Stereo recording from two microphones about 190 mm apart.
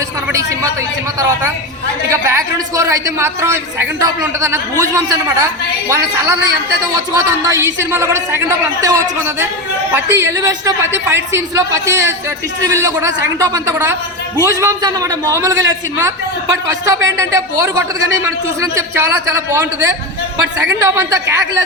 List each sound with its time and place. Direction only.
2.0 s a woman's voice: 15° right (ahead or behind)
6.9 s a woman's voice: 15° right (ahead or behind)